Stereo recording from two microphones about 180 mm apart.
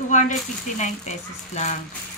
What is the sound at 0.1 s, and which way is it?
Speech, 45° left (ahead or behind).